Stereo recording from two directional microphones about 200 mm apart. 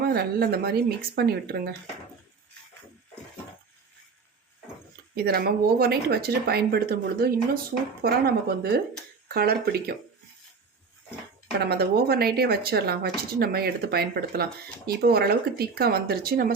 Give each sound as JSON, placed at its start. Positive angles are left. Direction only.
{"t": 0.0, "sound": "speech", "side_deg": -50}
{"t": 5.1, "sound": "speech", "side_deg": -50}
{"t": 11.6, "sound": "speech", "side_deg": -50}